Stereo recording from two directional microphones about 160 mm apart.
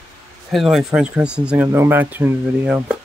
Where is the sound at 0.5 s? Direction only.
Centre (ahead or behind).